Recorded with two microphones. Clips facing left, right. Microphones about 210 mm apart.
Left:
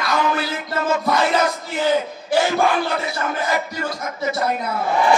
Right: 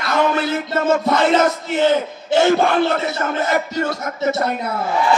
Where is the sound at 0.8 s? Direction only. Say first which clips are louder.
Right 3 dB; 25° right (ahead or behind).